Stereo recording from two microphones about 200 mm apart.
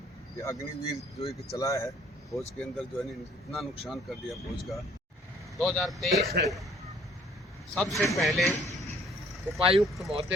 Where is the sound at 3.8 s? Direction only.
Centre (ahead or behind).